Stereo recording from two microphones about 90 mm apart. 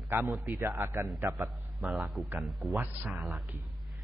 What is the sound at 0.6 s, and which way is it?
Speech, 35° right (ahead or behind).